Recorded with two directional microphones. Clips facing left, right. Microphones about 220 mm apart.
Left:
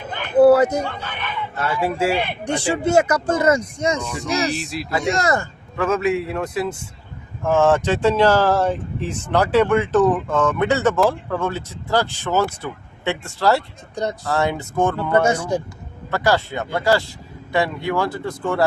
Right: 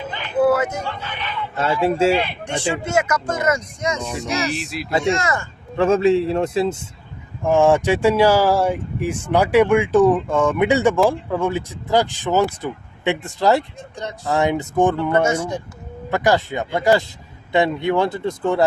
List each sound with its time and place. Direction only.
0.0 s a sound: 50° left (ahead or behind)
0.4 s a sound: 35° left (ahead or behind)
0.9 s speech: 50° left (ahead or behind)
1.5 s speech: 25° right (ahead or behind)
2.5 s speech: 35° left (ahead or behind)
4.5 s speech: centre (ahead or behind)
4.9 s speech: 25° right (ahead or behind)
5.1 s speech: 40° left (ahead or behind)
5.7 s speech: 30° right (ahead or behind)
7.4 s speech: 15° right (ahead or behind)
13.9 s speech: 40° left (ahead or behind)
14.3 s speech: 15° right (ahead or behind)